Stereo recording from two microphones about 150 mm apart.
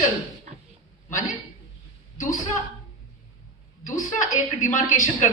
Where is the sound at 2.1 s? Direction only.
60° left (ahead or behind).